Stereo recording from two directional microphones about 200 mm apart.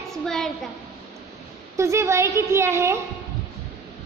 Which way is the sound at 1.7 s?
15° right (ahead or behind).